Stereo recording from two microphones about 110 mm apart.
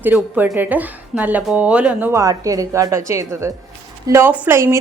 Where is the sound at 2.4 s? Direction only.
30° right (ahead or behind).